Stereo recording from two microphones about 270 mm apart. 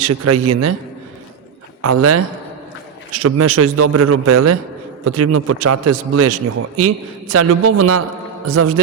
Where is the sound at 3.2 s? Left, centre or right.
Right.